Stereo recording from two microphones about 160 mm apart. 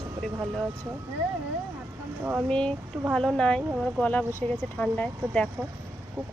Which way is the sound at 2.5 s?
5° left (ahead or behind).